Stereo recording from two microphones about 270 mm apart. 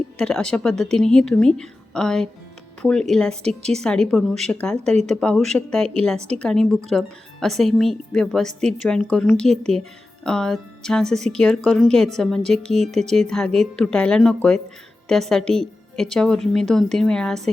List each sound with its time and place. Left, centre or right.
0.2 s a woman's voice: centre
6.1 s a woman's voice: right
6.4 s a woman's voice: centre